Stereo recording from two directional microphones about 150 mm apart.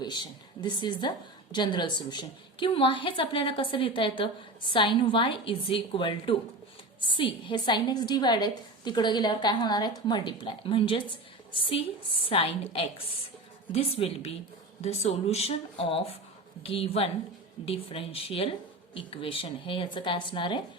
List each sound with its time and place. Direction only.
0.0 s a woman's voice: 30° left (ahead or behind)